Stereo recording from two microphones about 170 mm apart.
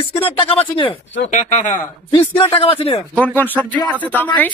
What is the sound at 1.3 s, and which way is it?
Speech, 45° left (ahead or behind).